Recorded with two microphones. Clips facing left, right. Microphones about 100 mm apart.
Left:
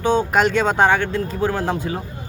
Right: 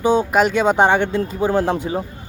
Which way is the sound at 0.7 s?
20° right (ahead or behind).